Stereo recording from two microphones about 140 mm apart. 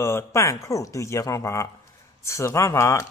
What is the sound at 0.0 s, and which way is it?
Speech, 20° left (ahead or behind).